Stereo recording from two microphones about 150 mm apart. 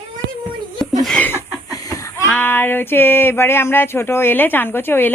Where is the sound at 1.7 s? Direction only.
20° left (ahead or behind).